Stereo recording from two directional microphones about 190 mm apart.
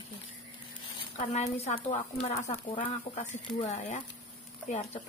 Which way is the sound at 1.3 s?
35° left (ahead or behind).